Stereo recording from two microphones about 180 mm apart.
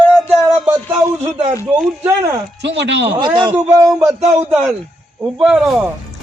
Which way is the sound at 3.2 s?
25° right (ahead or behind).